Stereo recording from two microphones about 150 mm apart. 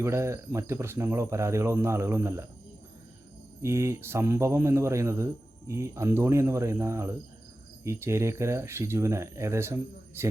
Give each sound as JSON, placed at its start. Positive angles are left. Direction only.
{"t": 0.0, "sound": "a man's voice", "side_deg": -20}
{"t": 3.6, "sound": "a man's voice", "side_deg": -20}